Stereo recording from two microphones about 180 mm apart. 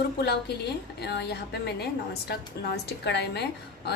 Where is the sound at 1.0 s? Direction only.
65° left (ahead or behind).